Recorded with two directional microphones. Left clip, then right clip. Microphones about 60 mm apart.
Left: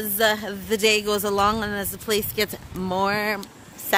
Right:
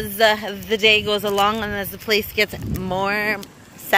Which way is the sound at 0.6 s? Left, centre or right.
Left.